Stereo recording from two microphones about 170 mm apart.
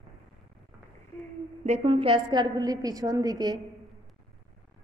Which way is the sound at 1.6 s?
40° right (ahead or behind).